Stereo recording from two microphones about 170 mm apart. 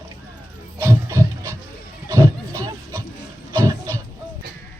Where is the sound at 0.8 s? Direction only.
15° right (ahead or behind).